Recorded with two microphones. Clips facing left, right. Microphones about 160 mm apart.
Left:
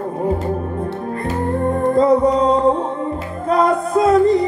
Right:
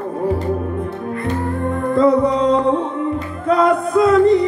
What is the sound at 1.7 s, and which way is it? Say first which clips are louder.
Music: even; 35° left (ahead or behind).